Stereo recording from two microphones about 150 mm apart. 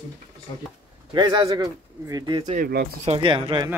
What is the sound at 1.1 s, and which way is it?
Speech, 30° right (ahead or behind).